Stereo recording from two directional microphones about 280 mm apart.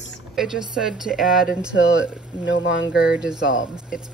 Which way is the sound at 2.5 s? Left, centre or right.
Left.